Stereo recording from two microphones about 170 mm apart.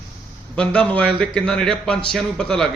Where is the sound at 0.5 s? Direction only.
5° left (ahead or behind).